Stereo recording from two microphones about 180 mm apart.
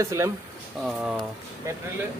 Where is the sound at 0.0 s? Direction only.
15° right (ahead or behind).